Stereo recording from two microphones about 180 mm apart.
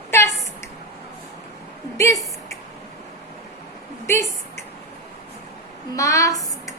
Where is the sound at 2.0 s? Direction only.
15° left (ahead or behind).